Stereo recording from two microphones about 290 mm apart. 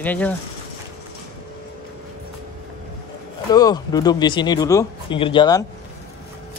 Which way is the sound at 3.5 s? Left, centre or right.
Centre.